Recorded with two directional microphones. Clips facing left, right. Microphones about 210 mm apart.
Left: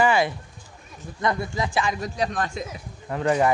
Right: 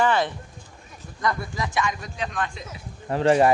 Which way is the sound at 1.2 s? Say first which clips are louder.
Left 2 dB; 25° left (ahead or behind).